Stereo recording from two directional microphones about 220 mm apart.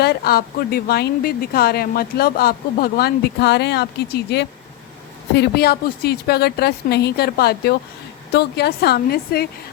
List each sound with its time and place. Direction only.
0.0 s speech: 45° left (ahead or behind)